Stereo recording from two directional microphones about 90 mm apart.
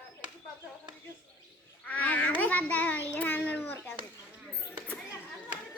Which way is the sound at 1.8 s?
15° left (ahead or behind).